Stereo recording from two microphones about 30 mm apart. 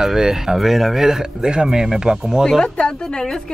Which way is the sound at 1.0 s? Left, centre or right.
Centre.